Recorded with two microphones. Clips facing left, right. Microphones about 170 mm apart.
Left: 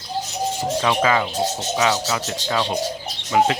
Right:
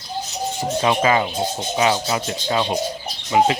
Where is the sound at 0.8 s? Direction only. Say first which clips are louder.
Right 2 dB; 25° right (ahead or behind).